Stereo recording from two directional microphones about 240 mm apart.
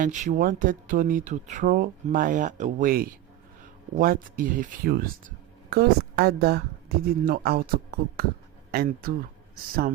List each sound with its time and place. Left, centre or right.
0.0 s speech: right